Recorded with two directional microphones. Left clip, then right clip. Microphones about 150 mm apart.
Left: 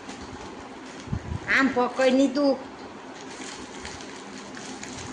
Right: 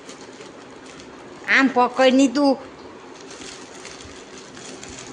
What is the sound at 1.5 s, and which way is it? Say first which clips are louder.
A man's voice: right 6 dB; 35° right (ahead or behind).